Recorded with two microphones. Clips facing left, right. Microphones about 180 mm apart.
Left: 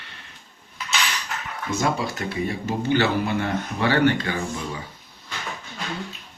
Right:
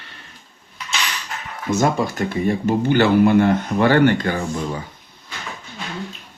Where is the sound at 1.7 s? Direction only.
45° right (ahead or behind).